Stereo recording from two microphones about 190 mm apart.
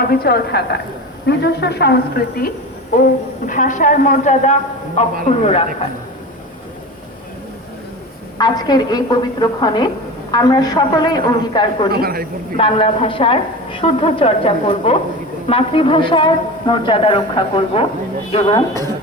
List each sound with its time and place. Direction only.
0.0 s a woman's voice: 55° left (ahead or behind)
2.9 s a man's voice: 45° left (ahead or behind)
8.4 s a woman's voice: 20° left (ahead or behind)
11.9 s a man's voice: 55° right (ahead or behind)
12.5 s a woman's voice: 30° left (ahead or behind)